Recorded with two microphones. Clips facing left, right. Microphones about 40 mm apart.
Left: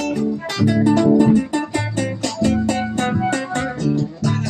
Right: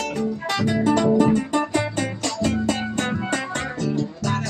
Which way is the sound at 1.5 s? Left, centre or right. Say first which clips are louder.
Even; centre.